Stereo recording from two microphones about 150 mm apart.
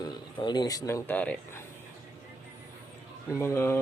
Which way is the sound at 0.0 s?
30° left (ahead or behind).